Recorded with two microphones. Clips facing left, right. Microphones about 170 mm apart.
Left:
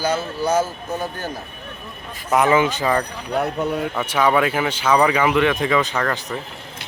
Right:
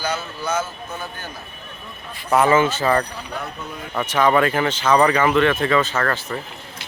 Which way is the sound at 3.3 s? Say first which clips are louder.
Left 11 dB; 65° left (ahead or behind).